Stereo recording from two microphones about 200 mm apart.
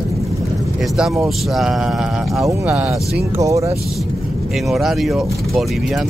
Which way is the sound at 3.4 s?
15° right (ahead or behind).